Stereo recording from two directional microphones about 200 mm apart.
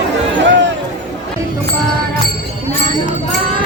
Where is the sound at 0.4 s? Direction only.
65° right (ahead or behind).